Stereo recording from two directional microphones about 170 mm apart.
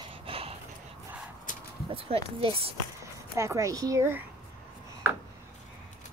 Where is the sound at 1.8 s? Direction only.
35° right (ahead or behind).